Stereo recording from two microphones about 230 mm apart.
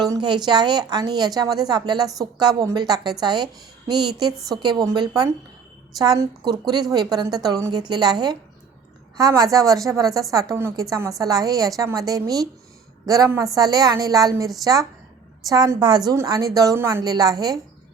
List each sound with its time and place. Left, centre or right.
0.0 s a woman's voice: centre